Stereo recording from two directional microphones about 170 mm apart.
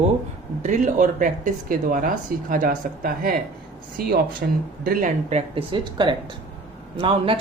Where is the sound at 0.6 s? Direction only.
45° right (ahead or behind); by 4.6 s 65° right (ahead or behind).